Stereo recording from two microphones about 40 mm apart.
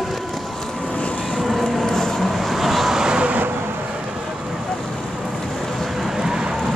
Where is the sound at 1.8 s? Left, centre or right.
Centre.